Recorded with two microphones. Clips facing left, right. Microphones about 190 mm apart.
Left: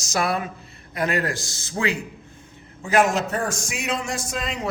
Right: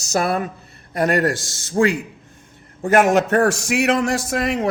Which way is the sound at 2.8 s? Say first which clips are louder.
Right 5 dB; 50° right (ahead or behind).